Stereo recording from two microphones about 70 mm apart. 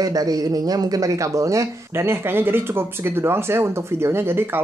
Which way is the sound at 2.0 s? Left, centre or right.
Right.